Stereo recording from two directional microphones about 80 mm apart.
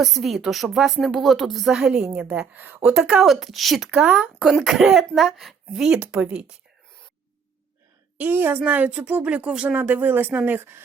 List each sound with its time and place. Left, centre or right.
0.0 s a woman's voice: centre
2.2 s speech: centre
2.9 s a woman's voice: centre
4.0 s a woman's voice: centre
8.2 s a woman's voice: right